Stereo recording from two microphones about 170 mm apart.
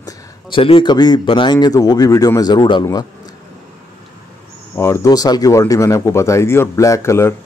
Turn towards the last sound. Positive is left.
turn(degrees=15)  # may be behind; listen again after turning